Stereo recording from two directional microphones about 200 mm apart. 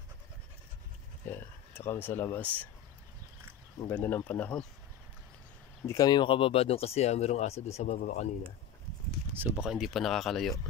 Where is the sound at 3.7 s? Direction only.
10° left (ahead or behind).